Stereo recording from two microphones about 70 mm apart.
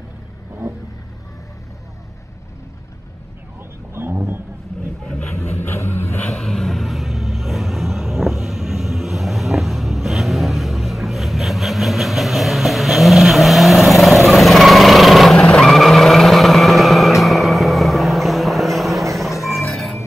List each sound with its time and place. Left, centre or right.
3.9 s roaring cats: right
5.0 s vehicle: centre
5.3 s vehicle: left
6.3 s vehicle: centre
15.3 s vehicle: centre
19.1 s music: centre